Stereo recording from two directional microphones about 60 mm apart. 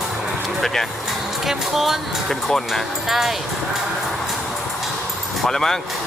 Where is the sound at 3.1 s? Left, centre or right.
Centre.